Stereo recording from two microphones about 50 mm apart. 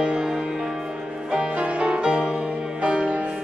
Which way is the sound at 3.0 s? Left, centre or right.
Right.